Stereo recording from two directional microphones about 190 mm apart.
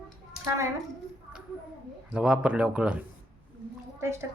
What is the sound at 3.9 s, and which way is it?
Speech, 15° right (ahead or behind).